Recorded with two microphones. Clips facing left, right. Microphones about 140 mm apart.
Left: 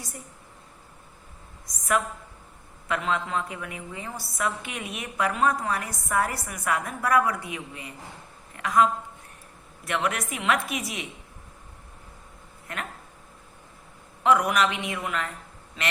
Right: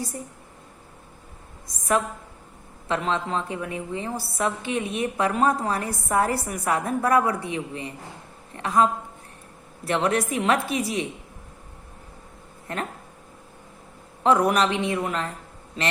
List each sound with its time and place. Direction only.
2.8 s a woman's voice: 30° right (ahead or behind)
12.6 s speech: 35° right (ahead or behind)
14.3 s a man's voice: 35° right (ahead or behind)